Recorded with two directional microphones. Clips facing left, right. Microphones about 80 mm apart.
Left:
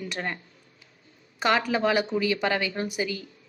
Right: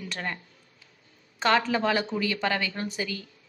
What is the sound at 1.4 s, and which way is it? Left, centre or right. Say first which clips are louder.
A woman's voice: even; centre.